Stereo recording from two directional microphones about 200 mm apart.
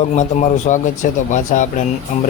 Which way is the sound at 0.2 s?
35° left (ahead or behind).